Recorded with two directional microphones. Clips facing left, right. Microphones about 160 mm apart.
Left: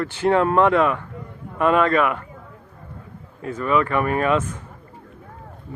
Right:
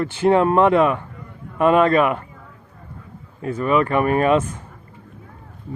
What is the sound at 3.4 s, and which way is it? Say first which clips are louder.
Speech: right 2 dB; 30° right (ahead or behind).